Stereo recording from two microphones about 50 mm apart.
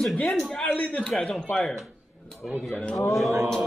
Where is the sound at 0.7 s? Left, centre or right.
Left.